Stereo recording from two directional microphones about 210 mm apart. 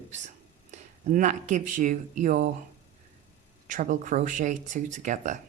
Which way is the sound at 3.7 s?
35° right (ahead or behind).